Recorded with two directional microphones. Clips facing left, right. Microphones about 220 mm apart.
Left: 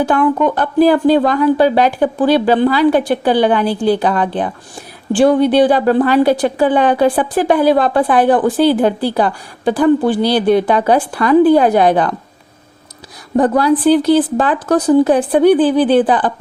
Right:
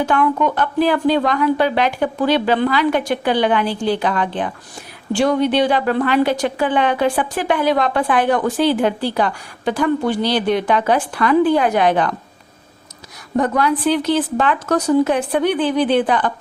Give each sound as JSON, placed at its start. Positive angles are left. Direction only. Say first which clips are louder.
{"t": 0.0, "sound": "a woman's voice", "louder": "left 4 dB", "side_deg": 35}
{"t": 13.3, "sound": "a woman's voice", "louder": "left 5 dB", "side_deg": 35}